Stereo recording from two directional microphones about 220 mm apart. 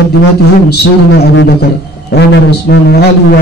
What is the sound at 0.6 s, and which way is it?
A man's voice, 45° left (ahead or behind).